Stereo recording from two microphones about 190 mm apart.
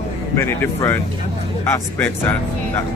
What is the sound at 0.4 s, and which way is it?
Speech, 15° left (ahead or behind).